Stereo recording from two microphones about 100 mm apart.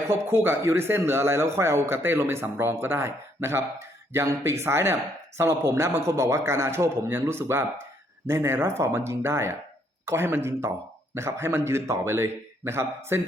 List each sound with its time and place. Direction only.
0.1 s a man's voice: 25° right (ahead or behind)